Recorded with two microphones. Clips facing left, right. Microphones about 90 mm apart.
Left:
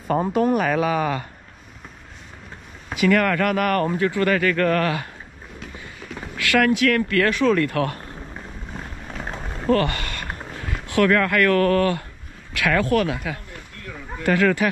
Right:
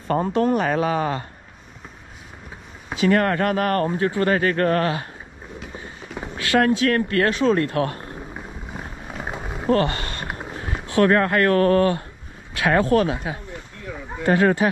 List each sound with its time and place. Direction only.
0.1 s speech: 5° left (ahead or behind)
0.6 s speech: 30° right (ahead or behind)
3.0 s speech: 35° right (ahead or behind)
6.3 s speech: 30° right (ahead or behind)
8.4 s vehicle: 10° right (ahead or behind)
9.7 s speech: 25° right (ahead or behind)
10.2 s vehicle: 10° right (ahead or behind)
10.6 s speech: 25° right (ahead or behind)
13.5 s a sound: 15° right (ahead or behind)
14.2 s speech: 30° right (ahead or behind)